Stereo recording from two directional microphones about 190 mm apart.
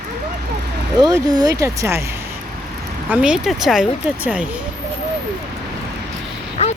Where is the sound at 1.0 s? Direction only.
20° right (ahead or behind).